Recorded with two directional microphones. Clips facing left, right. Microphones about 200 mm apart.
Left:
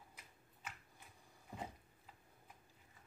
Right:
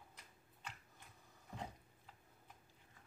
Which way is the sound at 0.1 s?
5° left (ahead or behind).